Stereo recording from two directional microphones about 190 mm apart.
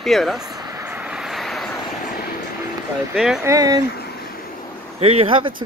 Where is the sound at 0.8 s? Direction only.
10° right (ahead or behind).